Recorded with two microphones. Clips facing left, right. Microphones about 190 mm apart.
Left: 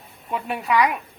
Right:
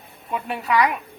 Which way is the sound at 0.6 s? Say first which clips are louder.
Even; 5° left (ahead or behind).